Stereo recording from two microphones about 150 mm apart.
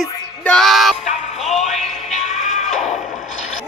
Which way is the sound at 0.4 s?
5° left (ahead or behind).